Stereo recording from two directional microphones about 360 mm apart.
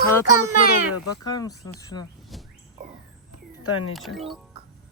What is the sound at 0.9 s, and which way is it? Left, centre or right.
Speech, left.